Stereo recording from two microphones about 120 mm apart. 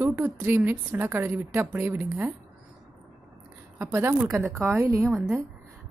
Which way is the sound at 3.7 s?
15° right (ahead or behind).